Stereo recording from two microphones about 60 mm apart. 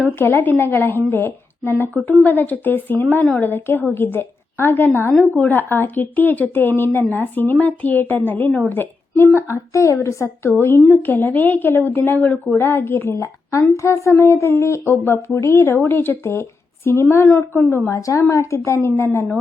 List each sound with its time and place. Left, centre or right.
0.2 s a woman's voice: left
1.9 s a woman's voice: left
9.5 s speech: left
10.5 s a woman's voice: centre
11.0 s a woman's voice: left
13.2 s a woman's voice: left
17.8 s a woman's voice: left